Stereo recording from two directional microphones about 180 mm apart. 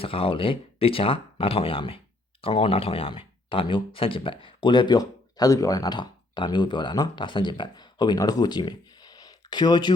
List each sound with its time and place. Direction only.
0.0 s speech: 30° left (ahead or behind)